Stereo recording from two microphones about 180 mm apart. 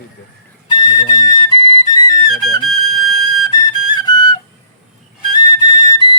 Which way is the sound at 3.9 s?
25° left (ahead or behind).